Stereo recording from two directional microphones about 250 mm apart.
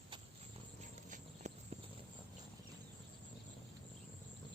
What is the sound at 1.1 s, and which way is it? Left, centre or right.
Clip-clop, right.